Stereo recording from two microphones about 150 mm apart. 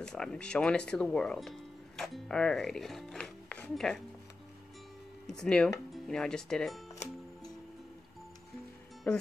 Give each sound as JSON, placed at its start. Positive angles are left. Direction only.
{"t": 0.0, "sound": "speech", "side_deg": 5}
{"t": 5.2, "sound": "speech", "side_deg": 5}
{"t": 9.1, "sound": "speech", "side_deg": 10}